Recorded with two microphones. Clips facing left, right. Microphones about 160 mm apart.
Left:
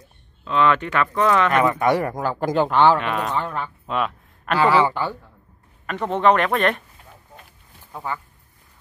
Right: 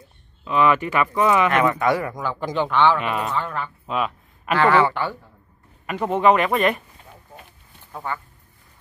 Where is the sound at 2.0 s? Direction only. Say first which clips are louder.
Left 4 dB; 45° left (ahead or behind).